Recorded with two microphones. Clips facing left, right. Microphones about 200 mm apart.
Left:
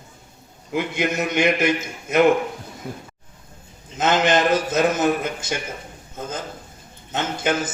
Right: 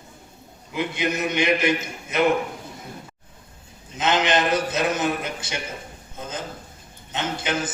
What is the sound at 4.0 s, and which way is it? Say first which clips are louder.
A man's voice: left 3 dB; 45° left (ahead or behind).